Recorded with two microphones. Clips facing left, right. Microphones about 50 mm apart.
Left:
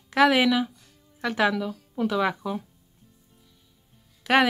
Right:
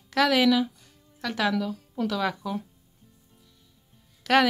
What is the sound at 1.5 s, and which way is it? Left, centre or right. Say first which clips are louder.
Speech: right 1 dB; centre.